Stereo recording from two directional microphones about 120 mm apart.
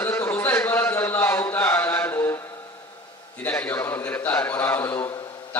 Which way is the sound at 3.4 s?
15° left (ahead or behind).